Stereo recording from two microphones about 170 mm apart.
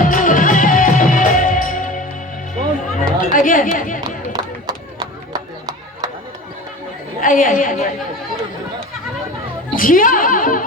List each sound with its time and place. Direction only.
0.0 s music: 50° left (ahead or behind)
3.0 s chatter: 55° left (ahead or behind)
4.3 s a sound: 25° right (ahead or behind)
7.2 s a woman's voice: 50° left (ahead or behind)
9.7 s a woman's voice: 55° left (ahead or behind)